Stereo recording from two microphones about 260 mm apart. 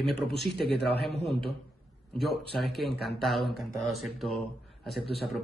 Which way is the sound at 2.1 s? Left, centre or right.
Centre.